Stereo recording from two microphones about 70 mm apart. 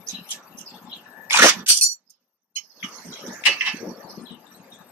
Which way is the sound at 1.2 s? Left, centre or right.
Right.